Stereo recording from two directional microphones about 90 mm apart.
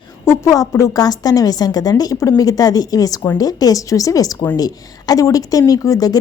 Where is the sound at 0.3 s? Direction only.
35° left (ahead or behind).